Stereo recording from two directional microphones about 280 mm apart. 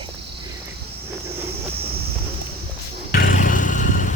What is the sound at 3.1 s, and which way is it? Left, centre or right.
Vehicle, left.